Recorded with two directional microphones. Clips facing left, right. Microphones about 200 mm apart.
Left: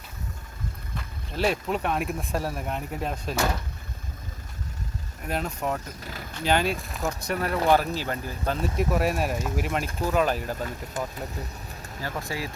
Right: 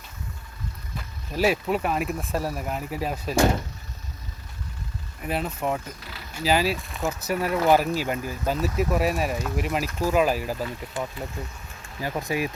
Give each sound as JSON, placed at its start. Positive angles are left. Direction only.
{"t": 1.3, "sound": "speech", "side_deg": -5}
{"t": 5.2, "sound": "speech", "side_deg": -5}
{"t": 6.0, "sound": "speech", "side_deg": 45}
{"t": 6.3, "sound": "speech", "side_deg": -5}
{"t": 11.0, "sound": "speech", "side_deg": 45}
{"t": 11.9, "sound": "speech", "side_deg": -15}